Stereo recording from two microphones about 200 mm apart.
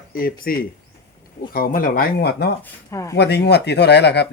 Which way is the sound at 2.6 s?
15° left (ahead or behind).